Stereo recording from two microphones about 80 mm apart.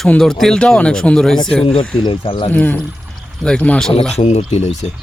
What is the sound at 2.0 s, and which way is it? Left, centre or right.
Speech, left.